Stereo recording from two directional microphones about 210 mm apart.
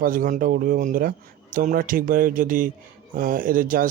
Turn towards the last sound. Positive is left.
turn(degrees=-40)  # may be behind; listen again after turning